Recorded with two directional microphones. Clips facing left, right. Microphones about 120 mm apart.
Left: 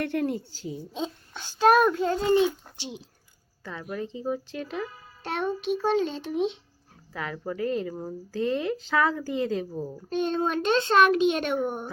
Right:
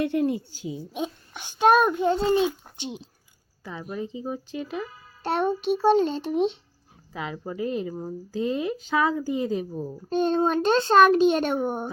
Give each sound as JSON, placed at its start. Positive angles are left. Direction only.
{"t": 0.0, "sound": "a child's voice", "side_deg": -10}
{"t": 5.2, "sound": "a child's voice", "side_deg": -40}
{"t": 7.1, "sound": "a child's voice", "side_deg": -15}
{"t": 10.1, "sound": "a child's voice", "side_deg": -35}